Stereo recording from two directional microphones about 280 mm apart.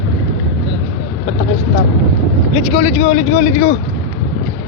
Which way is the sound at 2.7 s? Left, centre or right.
Left.